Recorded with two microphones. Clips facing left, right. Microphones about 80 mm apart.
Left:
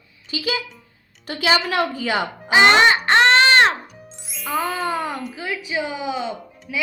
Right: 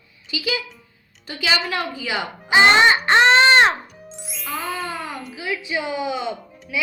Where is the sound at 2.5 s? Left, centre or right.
Left.